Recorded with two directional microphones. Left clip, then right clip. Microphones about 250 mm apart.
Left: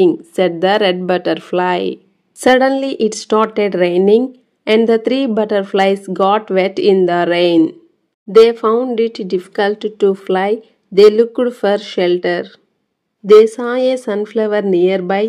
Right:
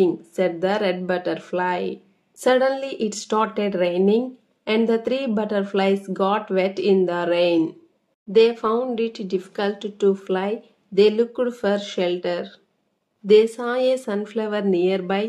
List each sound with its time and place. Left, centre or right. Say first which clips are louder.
0.0 s speech: left 8 dB; left